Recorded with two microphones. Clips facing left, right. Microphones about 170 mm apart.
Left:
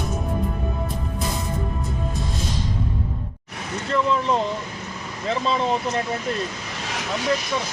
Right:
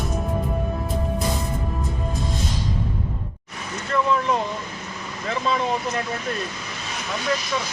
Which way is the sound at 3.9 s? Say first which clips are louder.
Even; 30° left (ahead or behind).